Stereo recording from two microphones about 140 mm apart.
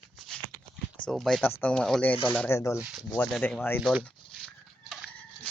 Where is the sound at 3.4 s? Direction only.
15° left (ahead or behind).